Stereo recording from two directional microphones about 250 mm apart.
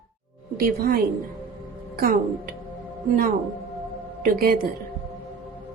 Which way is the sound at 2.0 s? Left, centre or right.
Right.